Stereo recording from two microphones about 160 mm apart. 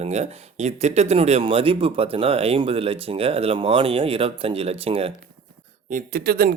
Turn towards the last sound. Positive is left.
turn(degrees=-70)  # may be behind; listen again after turning